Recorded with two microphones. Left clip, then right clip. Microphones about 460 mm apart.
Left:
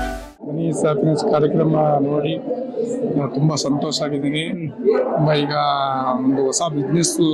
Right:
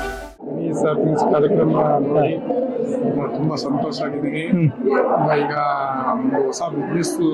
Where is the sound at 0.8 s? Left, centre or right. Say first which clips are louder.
Right 1 dB; left.